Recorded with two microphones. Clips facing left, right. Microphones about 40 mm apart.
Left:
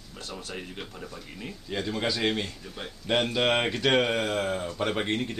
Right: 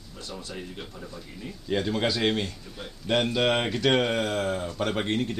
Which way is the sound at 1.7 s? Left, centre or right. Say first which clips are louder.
Right 3 dB; centre.